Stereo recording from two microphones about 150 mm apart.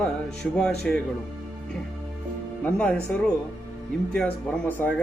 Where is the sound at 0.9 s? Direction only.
5° left (ahead or behind).